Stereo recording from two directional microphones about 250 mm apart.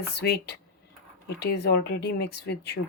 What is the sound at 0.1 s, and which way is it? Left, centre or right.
Speech, left.